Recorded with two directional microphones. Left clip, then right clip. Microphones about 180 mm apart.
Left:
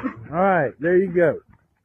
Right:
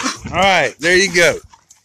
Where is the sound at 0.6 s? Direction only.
15° right (ahead or behind).